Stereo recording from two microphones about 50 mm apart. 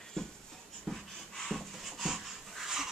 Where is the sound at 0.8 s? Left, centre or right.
Centre.